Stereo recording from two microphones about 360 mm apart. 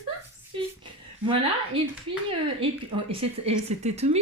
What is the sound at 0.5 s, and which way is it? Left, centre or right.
Speech, centre.